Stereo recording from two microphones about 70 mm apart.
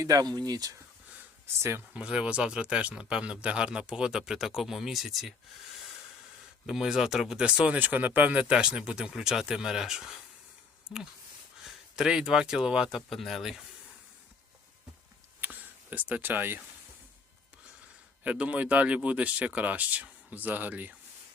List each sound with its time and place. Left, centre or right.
0.0 s speech: right
1.9 s speech: centre
6.7 s speech: centre
11.6 s speech: centre
13.1 s speech: centre
15.4 s a sound: right
18.2 s speech: centre